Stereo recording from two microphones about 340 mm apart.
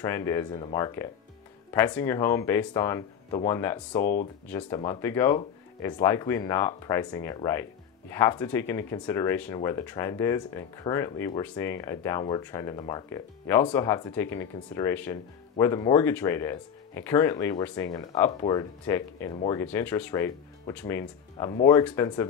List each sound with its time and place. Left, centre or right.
0.0 s speech: centre
4.0 s speech: left
4.5 s speech: centre